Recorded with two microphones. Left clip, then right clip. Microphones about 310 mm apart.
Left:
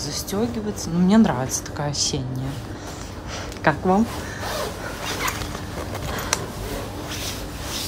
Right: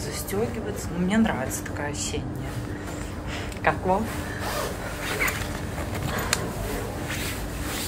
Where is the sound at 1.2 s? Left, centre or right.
Centre.